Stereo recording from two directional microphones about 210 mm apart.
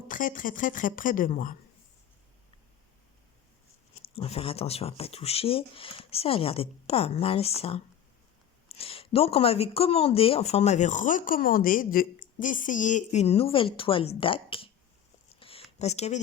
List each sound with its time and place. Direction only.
0.1 s a woman's voice: 40° left (ahead or behind)
4.1 s speech: 25° left (ahead or behind)
8.7 s speech: 25° left (ahead or behind)
15.4 s a sound: 25° left (ahead or behind)
15.8 s a woman's voice: 30° left (ahead or behind)